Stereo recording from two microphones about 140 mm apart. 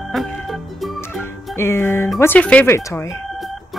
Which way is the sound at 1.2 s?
15° left (ahead or behind).